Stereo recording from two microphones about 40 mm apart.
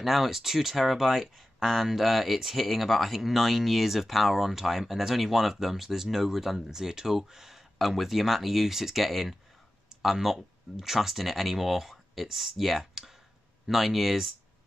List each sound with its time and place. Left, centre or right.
0.0 s speech: centre